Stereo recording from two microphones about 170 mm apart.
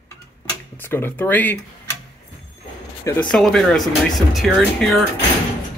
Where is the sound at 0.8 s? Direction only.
10° left (ahead or behind).